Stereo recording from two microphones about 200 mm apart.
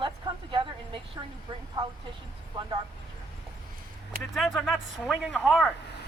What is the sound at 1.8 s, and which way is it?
Speech, 20° right (ahead or behind).